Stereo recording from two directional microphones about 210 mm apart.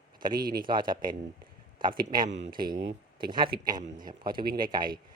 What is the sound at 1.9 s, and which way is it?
Speech, 40° right (ahead or behind).